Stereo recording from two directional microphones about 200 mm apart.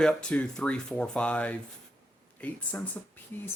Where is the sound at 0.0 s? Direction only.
5° left (ahead or behind).